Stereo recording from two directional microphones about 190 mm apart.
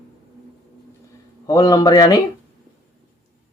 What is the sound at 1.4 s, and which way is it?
Speech, 20° left (ahead or behind).